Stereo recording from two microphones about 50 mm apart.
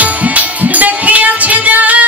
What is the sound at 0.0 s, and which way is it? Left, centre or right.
Music, right.